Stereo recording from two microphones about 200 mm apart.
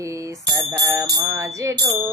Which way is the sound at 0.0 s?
15° right (ahead or behind).